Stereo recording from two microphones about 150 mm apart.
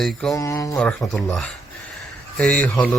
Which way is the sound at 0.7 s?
5° left (ahead or behind).